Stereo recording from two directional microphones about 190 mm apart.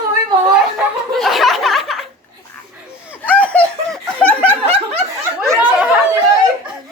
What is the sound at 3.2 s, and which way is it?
Snicker, 10° left (ahead or behind).